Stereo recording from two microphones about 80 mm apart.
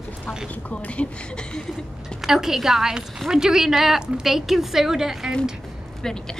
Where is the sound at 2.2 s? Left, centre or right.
Centre.